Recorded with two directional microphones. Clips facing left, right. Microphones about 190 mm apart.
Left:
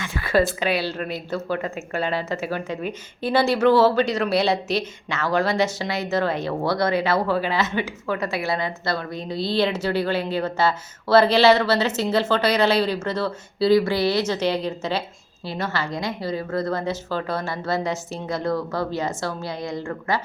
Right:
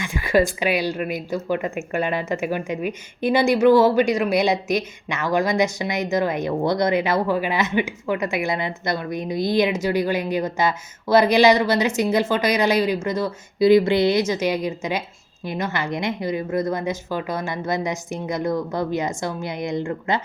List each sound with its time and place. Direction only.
0.0 s a woman's voice: 15° right (ahead or behind)